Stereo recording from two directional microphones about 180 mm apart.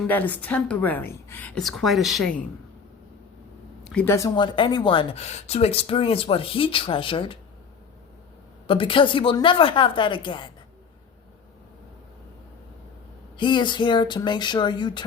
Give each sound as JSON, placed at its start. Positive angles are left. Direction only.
{"t": 0.1, "sound": "a woman's voice", "side_deg": 10}
{"t": 3.8, "sound": "speech", "side_deg": 10}
{"t": 8.6, "sound": "speech", "side_deg": 30}
{"t": 13.3, "sound": "speech", "side_deg": 25}